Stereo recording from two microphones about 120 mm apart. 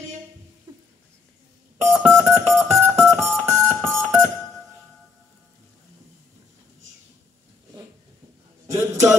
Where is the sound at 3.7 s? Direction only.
20° right (ahead or behind).